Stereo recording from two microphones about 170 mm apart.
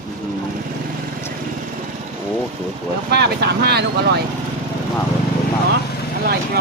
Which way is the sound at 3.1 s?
70° right (ahead or behind).